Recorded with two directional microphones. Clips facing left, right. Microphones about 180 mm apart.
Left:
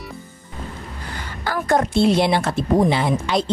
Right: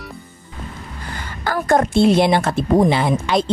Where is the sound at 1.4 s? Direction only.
50° right (ahead or behind).